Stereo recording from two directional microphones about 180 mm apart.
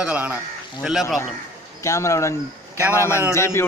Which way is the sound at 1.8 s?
15° left (ahead or behind).